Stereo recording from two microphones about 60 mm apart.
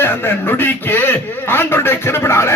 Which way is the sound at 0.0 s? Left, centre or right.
Left.